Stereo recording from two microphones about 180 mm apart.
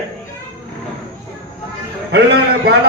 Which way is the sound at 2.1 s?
60° right (ahead or behind).